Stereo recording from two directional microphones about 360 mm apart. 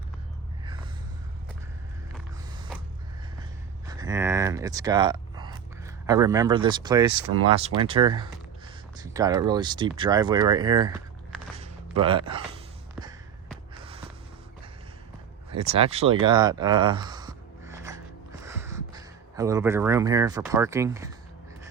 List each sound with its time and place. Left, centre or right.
3.8 s speech: centre
7.1 s speech: right
7.8 s speech: centre
12.0 s speech: centre
15.7 s a sound: centre